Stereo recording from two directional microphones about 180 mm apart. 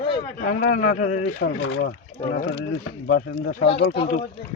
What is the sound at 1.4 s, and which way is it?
Speech, 90° left.